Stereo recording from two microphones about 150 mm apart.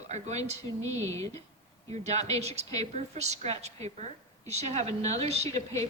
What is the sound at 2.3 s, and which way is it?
A woman's voice, 45° right (ahead or behind).